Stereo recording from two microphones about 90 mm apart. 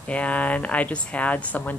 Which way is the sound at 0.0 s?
15° left (ahead or behind).